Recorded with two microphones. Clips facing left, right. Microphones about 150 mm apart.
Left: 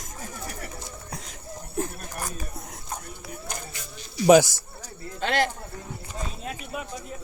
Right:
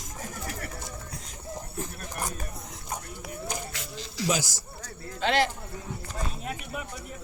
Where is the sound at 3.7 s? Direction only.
90° right.